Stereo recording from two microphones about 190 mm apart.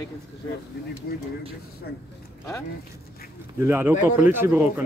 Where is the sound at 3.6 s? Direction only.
10° right (ahead or behind).